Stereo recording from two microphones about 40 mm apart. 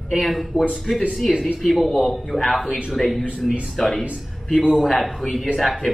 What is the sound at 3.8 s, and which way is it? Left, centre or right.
Speech, centre.